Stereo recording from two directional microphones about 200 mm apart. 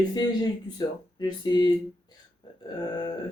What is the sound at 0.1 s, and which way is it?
Speech, 20° left (ahead or behind).